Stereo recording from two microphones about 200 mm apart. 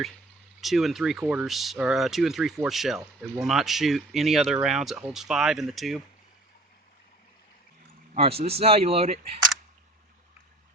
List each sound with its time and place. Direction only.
0.6 s speech: centre (ahead or behind)
8.1 s speech: 30° right (ahead or behind)